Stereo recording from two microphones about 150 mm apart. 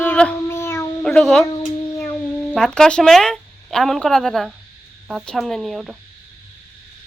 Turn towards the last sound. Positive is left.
turn(degrees=-5)  # may be behind; listen again after turning